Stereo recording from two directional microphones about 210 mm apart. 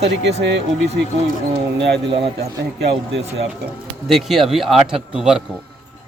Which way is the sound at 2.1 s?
30° right (ahead or behind).